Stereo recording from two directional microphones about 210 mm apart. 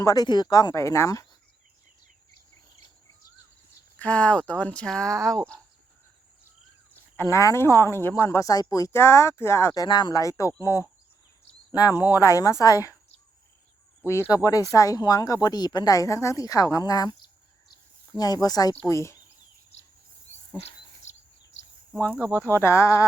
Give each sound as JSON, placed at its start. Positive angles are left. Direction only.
{"t": 0.0, "sound": "a woman's voice", "side_deg": 15}
{"t": 3.9, "sound": "speech", "side_deg": 5}
{"t": 7.2, "sound": "a woman's voice", "side_deg": 15}
{"t": 14.3, "sound": "a woman's voice", "side_deg": 15}
{"t": 18.2, "sound": "a woman's voice", "side_deg": 20}
{"t": 20.6, "sound": "a sound", "side_deg": 30}
{"t": 22.1, "sound": "speech", "side_deg": -10}
{"t": 22.6, "sound": "a woman's voice", "side_deg": 10}